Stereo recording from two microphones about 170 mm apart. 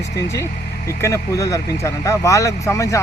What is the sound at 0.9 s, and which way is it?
Speech, 15° left (ahead or behind).